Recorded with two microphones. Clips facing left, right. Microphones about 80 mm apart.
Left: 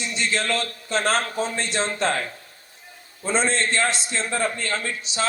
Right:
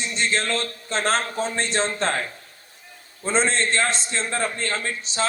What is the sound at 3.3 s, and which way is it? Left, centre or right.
A man's voice, right.